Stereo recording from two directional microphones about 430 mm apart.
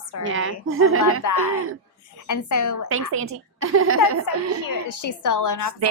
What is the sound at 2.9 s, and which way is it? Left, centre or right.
A woman's voice, right.